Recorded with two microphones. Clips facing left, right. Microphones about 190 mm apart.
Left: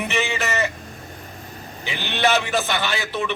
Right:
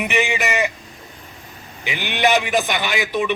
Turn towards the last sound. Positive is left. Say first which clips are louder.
# right 4 dB
turn(degrees=-15)  # may be behind; listen again after turning